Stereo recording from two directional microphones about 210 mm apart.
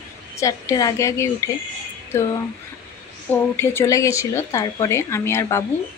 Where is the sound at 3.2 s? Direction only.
10° left (ahead or behind).